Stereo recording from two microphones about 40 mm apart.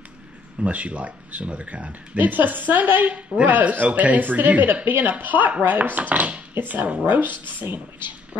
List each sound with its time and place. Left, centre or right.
0.6 s speech: right
6.5 s speech: right